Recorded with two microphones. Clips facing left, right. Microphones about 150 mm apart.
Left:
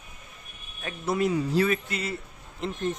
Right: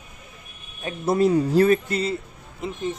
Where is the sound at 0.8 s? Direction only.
35° right (ahead or behind).